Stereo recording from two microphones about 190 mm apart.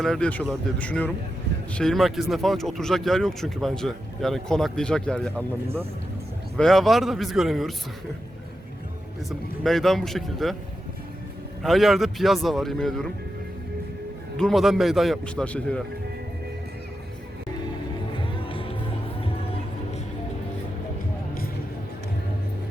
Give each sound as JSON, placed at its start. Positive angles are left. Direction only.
{"t": 0.0, "sound": "speech", "side_deg": 5}
{"t": 6.6, "sound": "speech", "side_deg": 0}
{"t": 9.6, "sound": "speech", "side_deg": 0}
{"t": 11.6, "sound": "speech", "side_deg": 0}
{"t": 14.3, "sound": "speech", "side_deg": 0}
{"t": 18.4, "sound": "music", "side_deg": 30}